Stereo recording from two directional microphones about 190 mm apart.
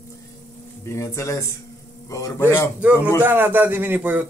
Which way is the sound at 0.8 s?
15° left (ahead or behind).